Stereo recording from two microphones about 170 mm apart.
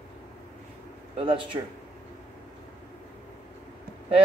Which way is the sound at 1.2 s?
30° right (ahead or behind).